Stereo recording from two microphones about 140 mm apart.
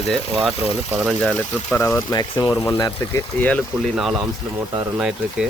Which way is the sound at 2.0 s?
30° left (ahead or behind).